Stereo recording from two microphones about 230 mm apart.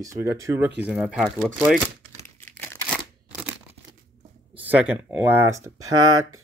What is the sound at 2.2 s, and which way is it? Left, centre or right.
Crumpling, centre.